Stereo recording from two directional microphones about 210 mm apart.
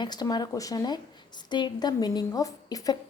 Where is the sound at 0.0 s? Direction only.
20° left (ahead or behind).